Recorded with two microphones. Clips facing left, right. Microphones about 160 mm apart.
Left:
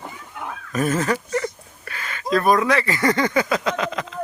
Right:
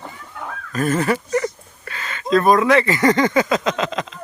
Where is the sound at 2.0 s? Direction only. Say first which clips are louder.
Right 3 dB; 25° right (ahead or behind).